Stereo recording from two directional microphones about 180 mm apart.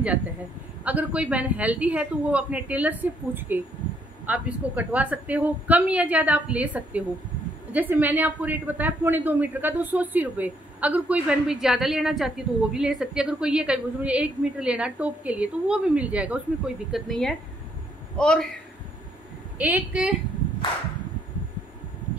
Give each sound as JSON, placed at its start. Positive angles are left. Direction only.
{"t": 0.8, "sound": "a woman's voice", "side_deg": -5}
{"t": 19.6, "sound": "a woman's voice", "side_deg": -10}